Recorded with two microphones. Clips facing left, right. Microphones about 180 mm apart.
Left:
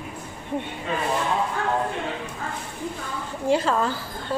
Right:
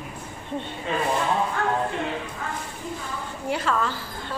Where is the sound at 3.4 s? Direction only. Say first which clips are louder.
Left 4 dB; 35° left (ahead or behind).